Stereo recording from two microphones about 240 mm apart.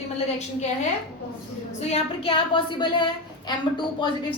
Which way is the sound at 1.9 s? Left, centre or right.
Left.